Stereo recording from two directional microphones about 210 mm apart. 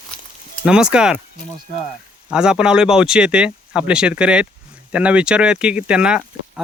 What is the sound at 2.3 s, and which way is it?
Speech, 5° right (ahead or behind).